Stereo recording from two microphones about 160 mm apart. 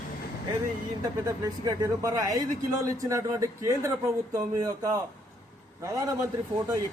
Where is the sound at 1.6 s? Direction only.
20° right (ahead or behind).